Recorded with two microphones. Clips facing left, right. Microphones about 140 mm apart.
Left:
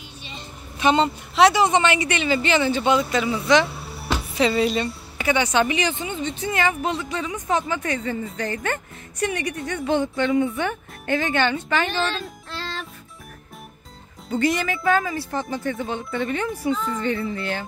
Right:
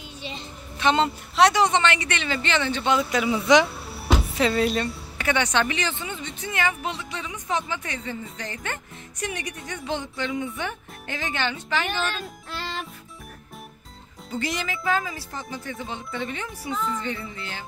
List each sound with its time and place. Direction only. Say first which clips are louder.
0.7 s speech: left 3 dB; 10° left (ahead or behind)
3.0 s speech: left 1 dB; 10° right (ahead or behind)
4.4 s speech: left 4 dB; centre (ahead or behind); by 6.5 s 25° left (ahead or behind)
6.5 s speech: left 3 dB; 45° left (ahead or behind)
12.5 s music: even; 10° right (ahead or behind)
14.4 s speech: left 7 dB; 55° left (ahead or behind)